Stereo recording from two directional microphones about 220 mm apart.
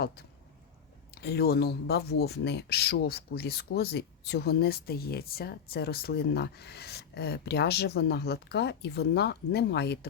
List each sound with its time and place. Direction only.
1.1 s speech: 45° left (ahead or behind)